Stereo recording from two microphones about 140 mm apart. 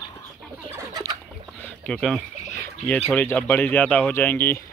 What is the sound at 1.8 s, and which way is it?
Speech, 5° left (ahead or behind).